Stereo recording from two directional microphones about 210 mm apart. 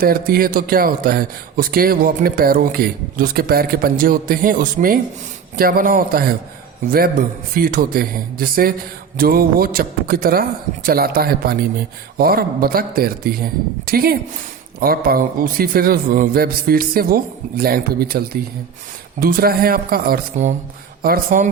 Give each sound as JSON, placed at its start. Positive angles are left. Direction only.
{"t": 0.0, "sound": "speech", "side_deg": -45}